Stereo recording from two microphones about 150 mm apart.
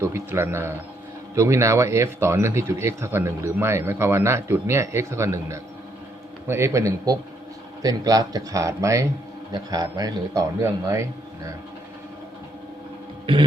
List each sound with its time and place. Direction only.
0.0 s a man's voice: 15° right (ahead or behind)
13.3 s music: 35° right (ahead or behind)